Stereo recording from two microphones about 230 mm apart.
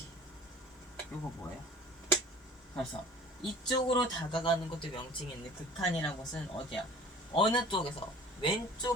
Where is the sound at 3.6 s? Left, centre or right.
Left.